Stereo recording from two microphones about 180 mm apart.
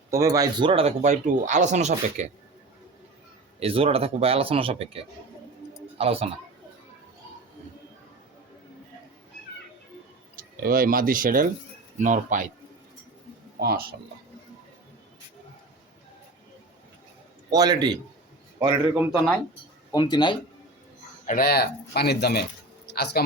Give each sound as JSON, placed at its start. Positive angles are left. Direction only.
{"t": 0.1, "sound": "speech", "side_deg": -15}
{"t": 0.7, "sound": "speech", "side_deg": -35}
{"t": 3.6, "sound": "speech", "side_deg": -35}
{"t": 10.3, "sound": "speech", "side_deg": -50}
{"t": 13.6, "sound": "speech", "side_deg": -60}
{"t": 17.5, "sound": "speech", "side_deg": -20}
{"t": 18.9, "sound": "speech", "side_deg": -5}
{"t": 19.9, "sound": "speech", "side_deg": 25}
{"t": 21.2, "sound": "speech", "side_deg": 55}